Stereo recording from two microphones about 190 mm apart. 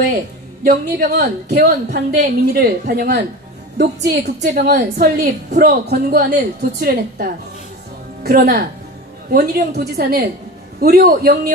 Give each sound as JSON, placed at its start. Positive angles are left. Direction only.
{"t": 0.7, "sound": "a woman's voice", "side_deg": -45}